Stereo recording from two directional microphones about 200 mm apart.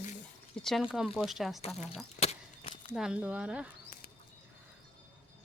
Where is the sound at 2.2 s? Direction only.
30° left (ahead or behind).